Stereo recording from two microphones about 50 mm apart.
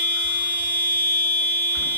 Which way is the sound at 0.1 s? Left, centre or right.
Right.